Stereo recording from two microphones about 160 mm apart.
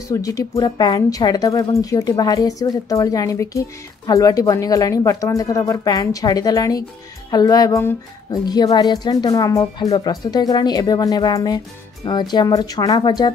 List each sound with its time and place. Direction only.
0.1 s a woman's voice: 20° left (ahead or behind)